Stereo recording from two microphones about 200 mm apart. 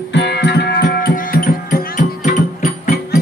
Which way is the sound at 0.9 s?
45° left (ahead or behind).